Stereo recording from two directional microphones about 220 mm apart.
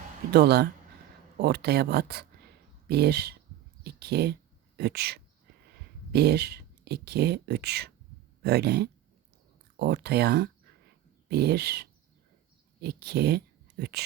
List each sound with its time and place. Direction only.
0.3 s speech: 45° right (ahead or behind)